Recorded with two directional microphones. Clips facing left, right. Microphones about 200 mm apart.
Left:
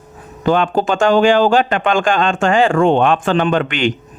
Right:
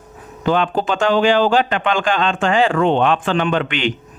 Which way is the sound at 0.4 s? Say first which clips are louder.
Left 3 dB; 45° left (ahead or behind).